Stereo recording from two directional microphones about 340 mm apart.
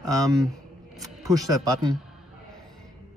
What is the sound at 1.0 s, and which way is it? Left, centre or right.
Speech, centre.